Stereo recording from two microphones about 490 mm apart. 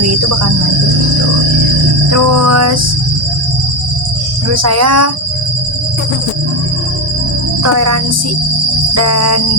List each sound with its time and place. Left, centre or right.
2.1 s cricket: right
4.5 s cricket: right
7.6 s cricket: right
9.0 s cricket: right